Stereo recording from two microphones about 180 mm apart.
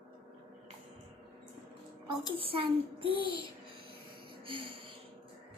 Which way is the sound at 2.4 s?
30° right (ahead or behind).